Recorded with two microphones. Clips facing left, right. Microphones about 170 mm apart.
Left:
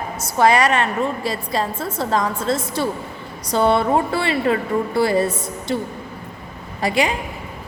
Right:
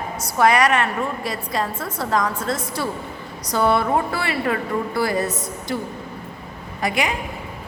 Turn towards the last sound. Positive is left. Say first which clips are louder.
# left 3 dB
turn(degrees=30)  # may be behind; listen again after turning